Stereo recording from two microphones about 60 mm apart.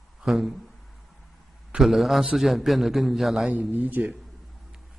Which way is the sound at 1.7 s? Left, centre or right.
Centre.